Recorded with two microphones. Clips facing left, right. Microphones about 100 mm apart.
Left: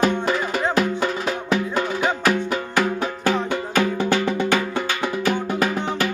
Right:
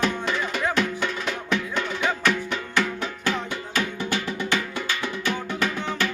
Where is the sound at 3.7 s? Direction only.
55° left (ahead or behind).